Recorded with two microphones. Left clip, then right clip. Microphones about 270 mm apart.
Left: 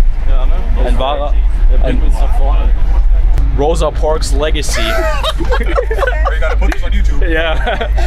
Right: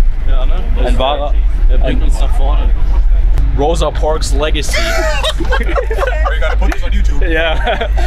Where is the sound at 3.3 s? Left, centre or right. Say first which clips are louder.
Even; centre.